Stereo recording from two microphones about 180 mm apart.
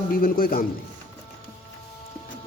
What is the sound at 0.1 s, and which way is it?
Speech, 55° left (ahead or behind).